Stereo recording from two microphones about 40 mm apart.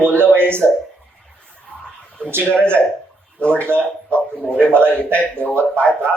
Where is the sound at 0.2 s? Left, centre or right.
Right.